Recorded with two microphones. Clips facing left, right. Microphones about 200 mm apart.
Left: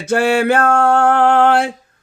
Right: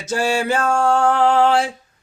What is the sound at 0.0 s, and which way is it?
Mantra, 60° left (ahead or behind).